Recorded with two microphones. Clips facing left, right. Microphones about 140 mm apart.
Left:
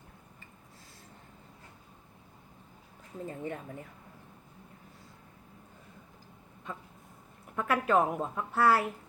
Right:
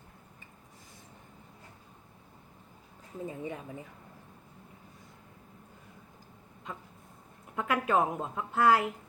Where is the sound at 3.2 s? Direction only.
15° right (ahead or behind).